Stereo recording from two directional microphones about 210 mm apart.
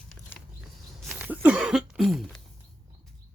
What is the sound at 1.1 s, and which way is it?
Cough, 10° right (ahead or behind).